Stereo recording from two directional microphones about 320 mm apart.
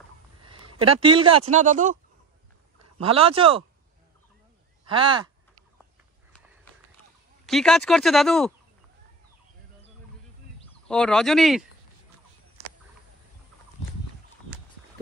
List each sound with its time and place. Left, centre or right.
0.4 s speech: centre
3.0 s a man's voice: centre
4.8 s a man's voice: centre
7.4 s speech: centre
10.9 s speech: centre